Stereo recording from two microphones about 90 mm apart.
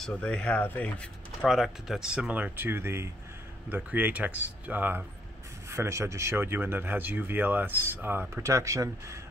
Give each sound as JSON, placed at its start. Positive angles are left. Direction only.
{"t": 0.1, "sound": "speech", "side_deg": 15}
{"t": 1.4, "sound": "speech", "side_deg": -5}
{"t": 5.7, "sound": "speech", "side_deg": -30}
{"t": 8.4, "sound": "speech", "side_deg": -35}